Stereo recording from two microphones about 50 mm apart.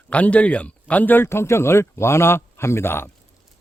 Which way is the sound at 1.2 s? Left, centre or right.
Left.